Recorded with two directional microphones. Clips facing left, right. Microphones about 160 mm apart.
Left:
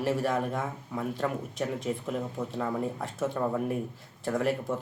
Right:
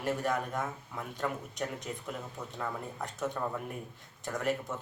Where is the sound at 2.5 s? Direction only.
10° left (ahead or behind).